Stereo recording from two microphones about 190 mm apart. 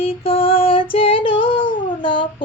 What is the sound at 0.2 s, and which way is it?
Female singing, 30° left (ahead or behind).